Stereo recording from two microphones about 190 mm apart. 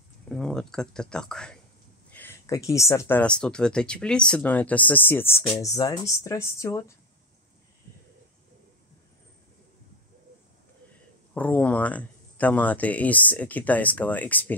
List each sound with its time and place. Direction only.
0.3 s speech: 5° left (ahead or behind)
11.3 s speech: 10° left (ahead or behind)